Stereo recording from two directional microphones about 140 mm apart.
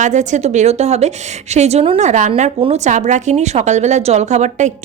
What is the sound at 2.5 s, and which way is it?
A woman's voice, 45° right (ahead or behind).